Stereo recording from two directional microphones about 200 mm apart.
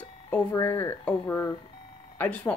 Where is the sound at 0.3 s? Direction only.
10° left (ahead or behind).